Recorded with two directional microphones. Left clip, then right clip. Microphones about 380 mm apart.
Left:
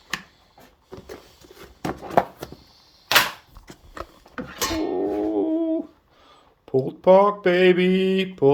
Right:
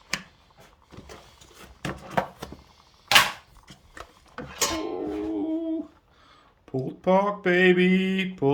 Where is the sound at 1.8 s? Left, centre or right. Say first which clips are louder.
Left 7 dB; centre.